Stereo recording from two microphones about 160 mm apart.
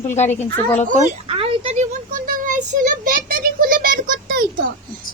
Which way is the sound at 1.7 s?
55° right (ahead or behind).